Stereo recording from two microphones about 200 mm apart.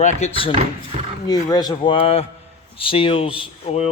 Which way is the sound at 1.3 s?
20° left (ahead or behind).